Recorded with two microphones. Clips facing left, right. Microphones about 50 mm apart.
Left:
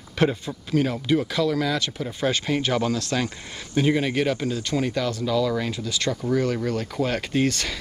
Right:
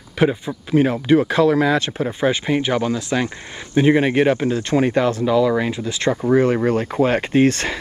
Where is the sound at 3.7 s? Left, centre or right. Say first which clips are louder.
Right 7 dB; right.